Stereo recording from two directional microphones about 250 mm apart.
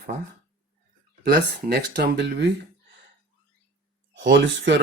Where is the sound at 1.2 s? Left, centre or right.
Right.